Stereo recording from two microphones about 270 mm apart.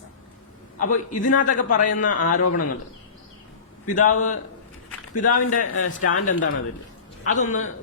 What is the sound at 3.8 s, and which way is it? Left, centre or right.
A man's voice, left.